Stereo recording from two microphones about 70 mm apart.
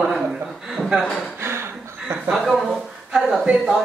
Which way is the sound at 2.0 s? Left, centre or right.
Centre.